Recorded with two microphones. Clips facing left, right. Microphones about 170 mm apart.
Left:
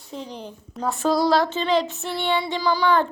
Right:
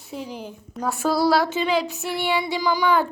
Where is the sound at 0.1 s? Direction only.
5° right (ahead or behind).